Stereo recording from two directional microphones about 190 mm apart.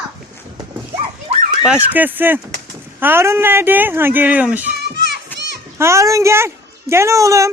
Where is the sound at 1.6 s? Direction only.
10° right (ahead or behind).